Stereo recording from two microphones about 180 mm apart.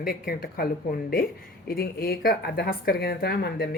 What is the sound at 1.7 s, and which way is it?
A woman's voice, 60° left (ahead or behind).